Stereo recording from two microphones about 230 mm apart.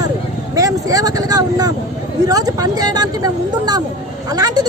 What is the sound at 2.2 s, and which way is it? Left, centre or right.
A woman's voice, centre.